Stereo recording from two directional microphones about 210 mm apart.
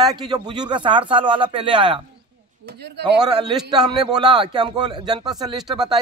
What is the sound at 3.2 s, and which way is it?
A man's voice, 20° right (ahead or behind).